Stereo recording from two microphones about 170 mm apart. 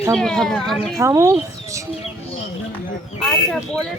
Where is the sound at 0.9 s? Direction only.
15° right (ahead or behind).